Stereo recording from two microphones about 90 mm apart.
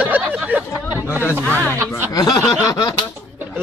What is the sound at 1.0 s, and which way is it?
Speech, 30° left (ahead or behind).